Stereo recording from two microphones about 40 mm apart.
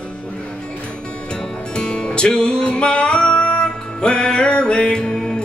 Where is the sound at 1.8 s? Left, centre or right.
Left.